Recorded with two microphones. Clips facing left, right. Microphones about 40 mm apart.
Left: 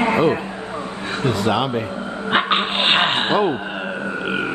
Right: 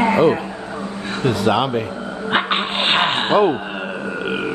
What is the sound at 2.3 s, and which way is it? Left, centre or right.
Dog, centre.